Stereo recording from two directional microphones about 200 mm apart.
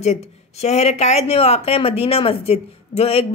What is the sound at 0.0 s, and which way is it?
Speech, 35° left (ahead or behind).